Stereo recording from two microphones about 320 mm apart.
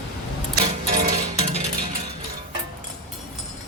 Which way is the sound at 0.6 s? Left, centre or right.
Centre.